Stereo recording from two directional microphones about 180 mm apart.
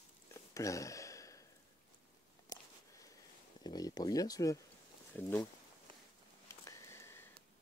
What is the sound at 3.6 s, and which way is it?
Speech, 20° left (ahead or behind).